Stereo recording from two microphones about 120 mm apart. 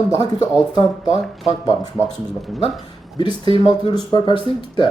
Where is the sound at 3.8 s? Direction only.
40° left (ahead or behind).